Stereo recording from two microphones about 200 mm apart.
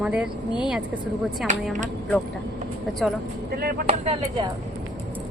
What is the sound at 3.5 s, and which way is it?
Speech, 50° right (ahead or behind).